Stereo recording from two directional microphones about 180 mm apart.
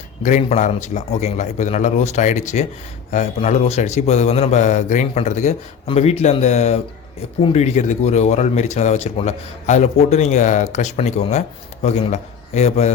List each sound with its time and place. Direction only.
0.2 s speech: 45° left (ahead or behind)